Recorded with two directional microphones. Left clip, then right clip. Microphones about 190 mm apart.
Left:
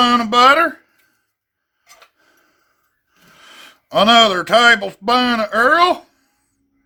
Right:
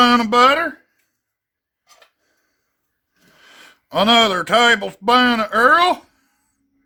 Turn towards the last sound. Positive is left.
turn(degrees=-10)  # may be behind; listen again after turning